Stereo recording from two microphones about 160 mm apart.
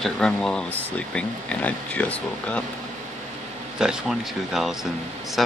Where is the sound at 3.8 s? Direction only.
5° right (ahead or behind).